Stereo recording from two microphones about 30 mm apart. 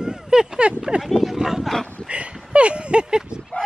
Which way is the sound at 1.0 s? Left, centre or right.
Centre.